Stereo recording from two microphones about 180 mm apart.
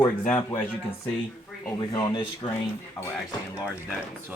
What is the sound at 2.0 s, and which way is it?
Speech, 25° left (ahead or behind).